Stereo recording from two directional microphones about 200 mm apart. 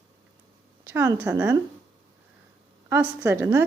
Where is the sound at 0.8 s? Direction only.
10° right (ahead or behind).